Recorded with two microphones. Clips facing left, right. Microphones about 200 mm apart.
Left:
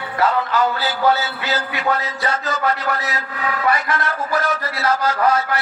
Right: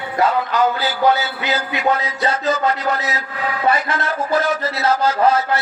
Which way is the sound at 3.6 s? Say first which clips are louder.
Right 2 dB; 25° right (ahead or behind).